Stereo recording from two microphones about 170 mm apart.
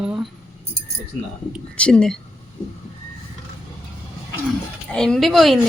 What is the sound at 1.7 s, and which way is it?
Speech, 5° left (ahead or behind).